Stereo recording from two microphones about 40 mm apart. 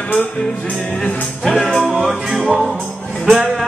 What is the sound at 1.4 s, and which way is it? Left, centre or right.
Music, centre.